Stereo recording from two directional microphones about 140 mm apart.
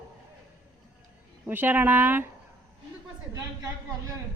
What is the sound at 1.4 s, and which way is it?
Speech, 15° right (ahead or behind).